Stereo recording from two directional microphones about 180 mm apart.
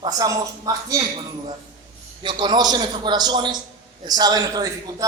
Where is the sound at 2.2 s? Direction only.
25° right (ahead or behind).